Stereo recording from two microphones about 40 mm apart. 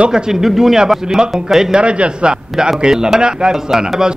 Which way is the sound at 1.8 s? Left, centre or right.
Right.